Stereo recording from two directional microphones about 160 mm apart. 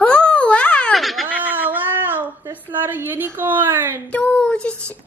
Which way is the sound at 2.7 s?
10° right (ahead or behind).